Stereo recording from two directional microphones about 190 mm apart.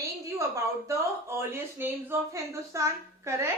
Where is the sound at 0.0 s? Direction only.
15° right (ahead or behind).